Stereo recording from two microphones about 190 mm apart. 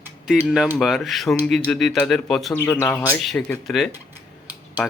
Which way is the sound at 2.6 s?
10° left (ahead or behind).